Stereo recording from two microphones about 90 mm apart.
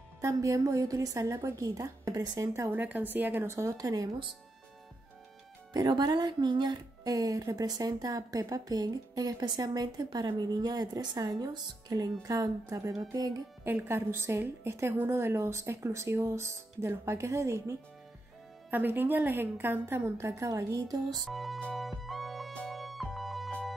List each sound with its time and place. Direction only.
0.2 s a woman's voice: 35° right (ahead or behind)
2.7 s a woman's voice: 20° right (ahead or behind); by 4.1 s 40° right (ahead or behind)
5.7 s speech: 50° right (ahead or behind)
13.7 s a woman's voice: 25° right (ahead or behind)
18.7 s a woman's voice: 20° right (ahead or behind); by 21.0 s 35° right (ahead or behind)
21.3 s speech: centre (ahead or behind)
21.7 s music: centre (ahead or behind)